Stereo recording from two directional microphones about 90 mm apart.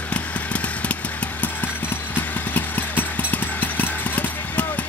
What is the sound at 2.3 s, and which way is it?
Clip-clop, 20° left (ahead or behind).